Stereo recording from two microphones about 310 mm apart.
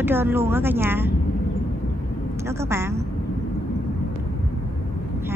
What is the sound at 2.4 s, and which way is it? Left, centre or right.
Speech, centre.